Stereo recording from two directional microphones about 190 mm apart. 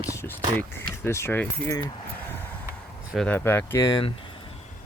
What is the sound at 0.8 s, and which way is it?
Speech, 15° left (ahead or behind).